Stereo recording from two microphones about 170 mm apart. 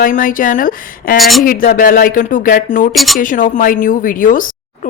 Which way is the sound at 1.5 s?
55° left (ahead or behind).